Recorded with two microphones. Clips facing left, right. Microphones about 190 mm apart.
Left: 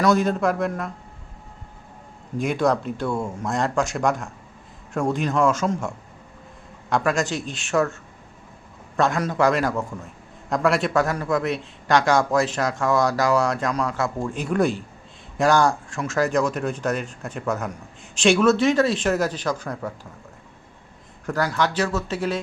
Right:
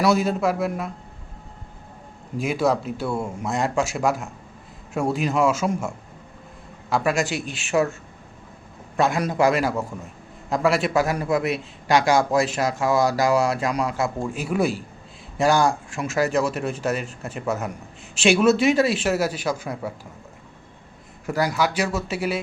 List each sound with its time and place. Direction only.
0.0 s a man's voice: 5° right (ahead or behind)
2.4 s a man's voice: 5° right (ahead or behind)
6.9 s a man's voice: 5° right (ahead or behind)
9.0 s a man's voice: 10° right (ahead or behind)
21.2 s a man's voice: 10° right (ahead or behind)